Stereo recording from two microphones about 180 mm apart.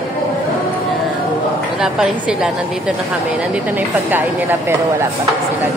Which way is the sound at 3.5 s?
10° right (ahead or behind).